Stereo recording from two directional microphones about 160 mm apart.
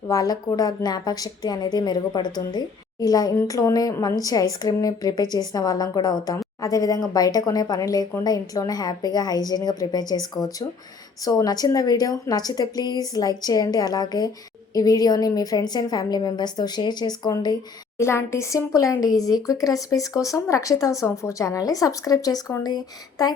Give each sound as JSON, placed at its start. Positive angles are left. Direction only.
{"t": 0.1, "sound": "a woman's voice", "side_deg": 20}